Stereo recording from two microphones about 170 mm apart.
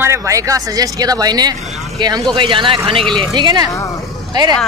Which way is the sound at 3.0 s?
5° left (ahead or behind).